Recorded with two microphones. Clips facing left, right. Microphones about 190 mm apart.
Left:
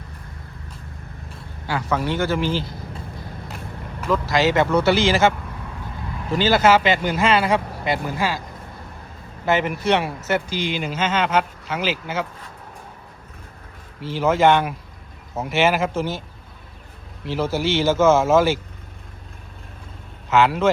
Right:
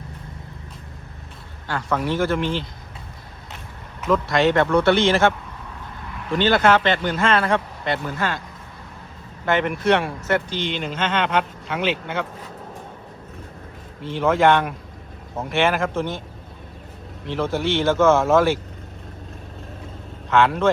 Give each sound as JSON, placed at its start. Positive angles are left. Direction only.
{"t": 1.6, "sound": "speech", "side_deg": 5}
{"t": 4.0, "sound": "speech", "side_deg": 0}
{"t": 6.3, "sound": "speech", "side_deg": 5}
{"t": 9.5, "sound": "speech", "side_deg": 5}
{"t": 14.0, "sound": "speech", "side_deg": 5}
{"t": 17.2, "sound": "speech", "side_deg": 5}
{"t": 20.3, "sound": "speech", "side_deg": 5}